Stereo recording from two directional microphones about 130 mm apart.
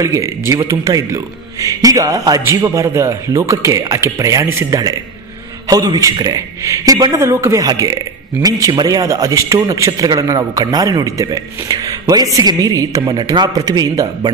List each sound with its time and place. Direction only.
0.0 s a man's voice: 25° right (ahead or behind)